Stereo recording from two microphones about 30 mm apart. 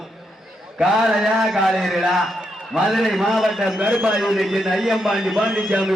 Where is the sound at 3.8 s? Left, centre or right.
Right.